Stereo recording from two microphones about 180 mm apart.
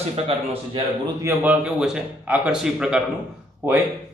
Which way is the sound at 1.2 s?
15° right (ahead or behind).